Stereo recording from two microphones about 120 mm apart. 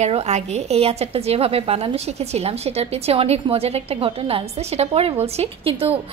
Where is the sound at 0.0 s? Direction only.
65° right (ahead or behind).